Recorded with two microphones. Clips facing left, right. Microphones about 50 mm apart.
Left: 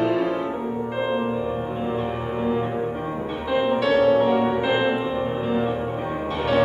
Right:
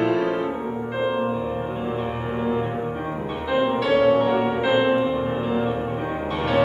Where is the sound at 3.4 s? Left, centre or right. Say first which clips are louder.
Even; centre.